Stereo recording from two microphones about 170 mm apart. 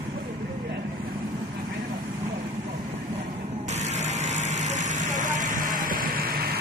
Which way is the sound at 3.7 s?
40° right (ahead or behind).